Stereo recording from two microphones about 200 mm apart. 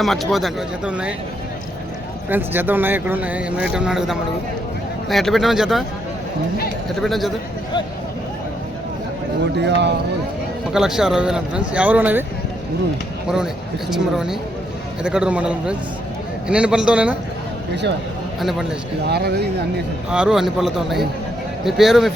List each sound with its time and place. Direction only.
0.0 s speech: centre (ahead or behind)
2.3 s speech: 10° right (ahead or behind)
7.0 s speech: centre (ahead or behind)
9.6 s speech: 60° right (ahead or behind)
10.8 s speech: centre (ahead or behind)
13.2 s speech: 5° right (ahead or behind)
18.3 s speech: centre (ahead or behind)
19.0 s speech: 55° right (ahead or behind)
20.1 s speech: 5° right (ahead or behind)